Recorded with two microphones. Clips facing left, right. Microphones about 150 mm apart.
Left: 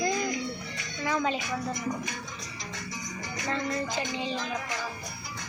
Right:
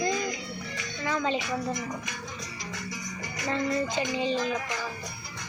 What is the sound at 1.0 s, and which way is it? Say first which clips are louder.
Speech: even; 10° left (ahead or behind).